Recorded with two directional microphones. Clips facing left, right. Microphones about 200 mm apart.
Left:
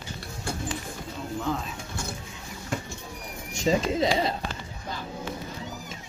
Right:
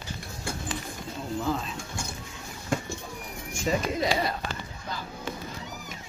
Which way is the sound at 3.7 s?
25° left (ahead or behind).